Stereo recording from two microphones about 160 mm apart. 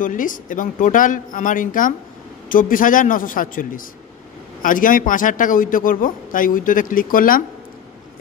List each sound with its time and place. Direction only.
0.0 s a man's voice: 55° left (ahead or behind)